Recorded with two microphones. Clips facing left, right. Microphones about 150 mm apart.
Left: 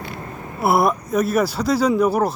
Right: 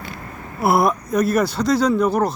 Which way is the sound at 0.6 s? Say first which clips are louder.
Even; 5° left (ahead or behind).